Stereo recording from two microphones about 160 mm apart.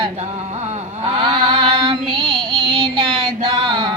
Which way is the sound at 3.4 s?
30° right (ahead or behind).